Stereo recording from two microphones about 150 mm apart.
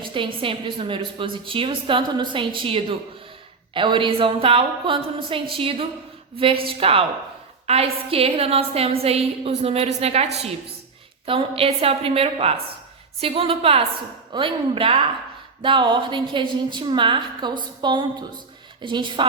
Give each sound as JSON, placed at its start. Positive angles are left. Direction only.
{"t": 0.0, "sound": "a woman's voice", "side_deg": -35}
{"t": 11.3, "sound": "a woman's voice", "side_deg": -40}